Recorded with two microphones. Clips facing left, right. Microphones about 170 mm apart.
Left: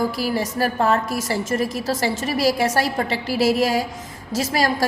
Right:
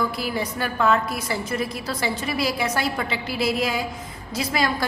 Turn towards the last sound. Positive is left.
turn(degrees=40)  # may be behind; listen again after turning